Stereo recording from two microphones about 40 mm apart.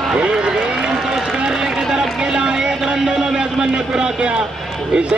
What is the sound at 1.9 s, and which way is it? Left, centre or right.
Vehicle, centre.